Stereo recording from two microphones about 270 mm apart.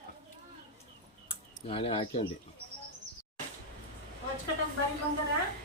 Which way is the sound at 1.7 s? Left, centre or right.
Left.